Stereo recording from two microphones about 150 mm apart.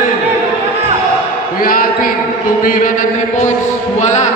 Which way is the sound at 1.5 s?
70° left (ahead or behind).